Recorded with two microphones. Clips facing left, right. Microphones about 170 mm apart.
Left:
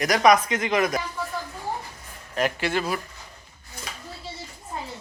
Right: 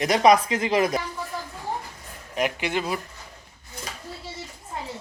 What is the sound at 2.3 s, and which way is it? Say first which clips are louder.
Speech: left 1 dB; 15° right (ahead or behind).